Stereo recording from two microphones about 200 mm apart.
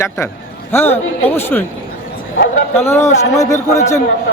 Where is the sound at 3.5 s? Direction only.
35° left (ahead or behind).